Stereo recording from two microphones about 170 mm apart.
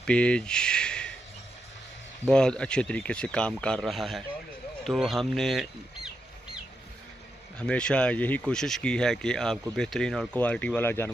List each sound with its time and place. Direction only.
0.0 s a sound: 5° left (ahead or behind)
2.2 s speech: 5° left (ahead or behind)
7.5 s speech: 5° left (ahead or behind)